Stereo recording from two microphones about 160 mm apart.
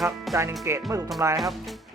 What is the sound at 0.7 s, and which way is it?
Speech, 15° right (ahead or behind).